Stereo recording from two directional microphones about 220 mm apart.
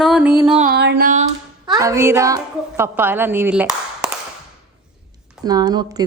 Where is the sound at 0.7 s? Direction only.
50° right (ahead or behind).